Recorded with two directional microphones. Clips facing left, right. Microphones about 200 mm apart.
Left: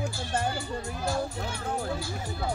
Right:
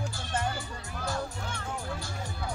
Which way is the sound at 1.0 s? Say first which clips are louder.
Left 3 dB; 10° left (ahead or behind).